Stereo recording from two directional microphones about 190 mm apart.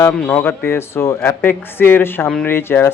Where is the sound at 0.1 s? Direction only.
10° left (ahead or behind).